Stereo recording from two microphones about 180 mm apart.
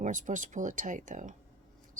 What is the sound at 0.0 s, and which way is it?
Speech, 45° right (ahead or behind).